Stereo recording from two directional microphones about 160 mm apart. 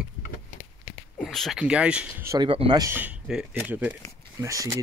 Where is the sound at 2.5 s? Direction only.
30° right (ahead or behind).